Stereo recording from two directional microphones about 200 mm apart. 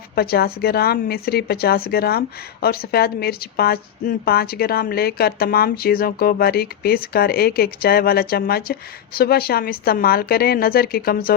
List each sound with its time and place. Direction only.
0.2 s a woman's voice: 50° left (ahead or behind)